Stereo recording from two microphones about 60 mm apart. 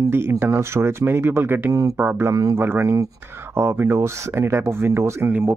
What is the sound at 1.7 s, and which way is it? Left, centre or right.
Speech, right.